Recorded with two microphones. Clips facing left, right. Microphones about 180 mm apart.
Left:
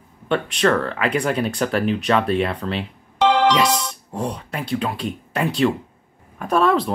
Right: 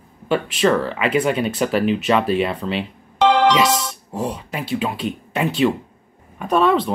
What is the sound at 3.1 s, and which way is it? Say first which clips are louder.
Music: right 2 dB; 55° right (ahead or behind).